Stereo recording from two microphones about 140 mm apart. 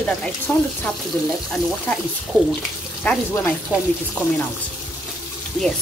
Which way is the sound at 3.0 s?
10° left (ahead or behind).